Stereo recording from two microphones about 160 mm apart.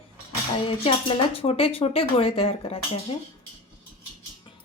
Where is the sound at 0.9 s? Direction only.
35° left (ahead or behind).